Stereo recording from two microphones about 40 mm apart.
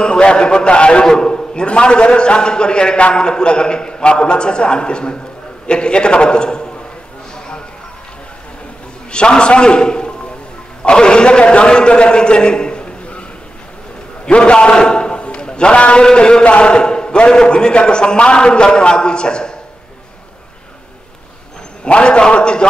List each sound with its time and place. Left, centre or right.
0.0 s a man's voice: left
7.3 s a sound: left
9.1 s a man's voice: left
14.2 s a man's voice: left
21.8 s a man's voice: left